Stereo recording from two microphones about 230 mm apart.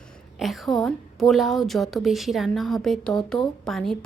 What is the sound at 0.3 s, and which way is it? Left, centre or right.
A woman's voice, centre.